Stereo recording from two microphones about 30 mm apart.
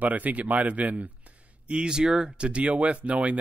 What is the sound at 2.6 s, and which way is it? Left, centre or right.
Speech, right.